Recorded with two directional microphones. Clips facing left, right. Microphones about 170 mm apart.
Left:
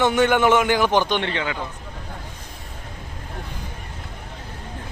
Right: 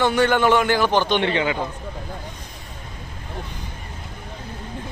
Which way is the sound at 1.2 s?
15° right (ahead or behind).